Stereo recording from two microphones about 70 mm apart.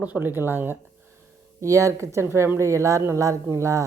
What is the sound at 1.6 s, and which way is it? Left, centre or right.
A woman's voice, right.